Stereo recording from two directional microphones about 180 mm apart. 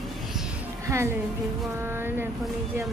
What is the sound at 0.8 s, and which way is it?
A woman's voice, 15° right (ahead or behind).